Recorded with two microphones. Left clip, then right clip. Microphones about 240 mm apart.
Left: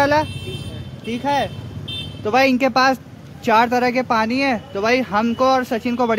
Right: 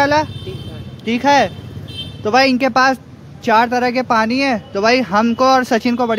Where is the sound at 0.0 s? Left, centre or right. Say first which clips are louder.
Right 2 dB; centre.